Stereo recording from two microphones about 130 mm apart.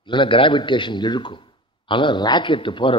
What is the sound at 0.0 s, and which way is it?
A man's voice, 40° left (ahead or behind).